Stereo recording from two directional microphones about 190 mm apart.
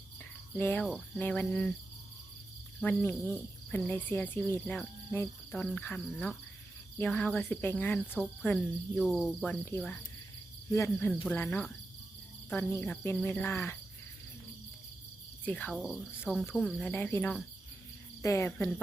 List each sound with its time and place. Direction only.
0.5 s cricket: 10° left (ahead or behind)
2.8 s cricket: 10° left (ahead or behind)
5.5 s speech: 5° left (ahead or behind)
7.0 s cricket: 5° left (ahead or behind)
9.0 s speech: centre (ahead or behind)
10.7 s cricket: 15° left (ahead or behind)
15.4 s cricket: 5° left (ahead or behind)
15.7 s speech: centre (ahead or behind)
16.3 s cricket: centre (ahead or behind); by 18.7 s 15° left (ahead or behind)